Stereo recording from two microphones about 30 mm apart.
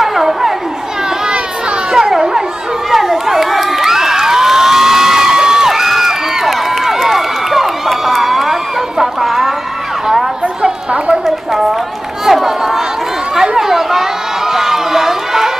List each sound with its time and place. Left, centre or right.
0.0 s chatter: centre
1.9 s children playing: centre
2.9 s crowd: centre
5.7 s crowd: centre
12.3 s run: centre
13.6 s chatter: centre
14.5 s run: centre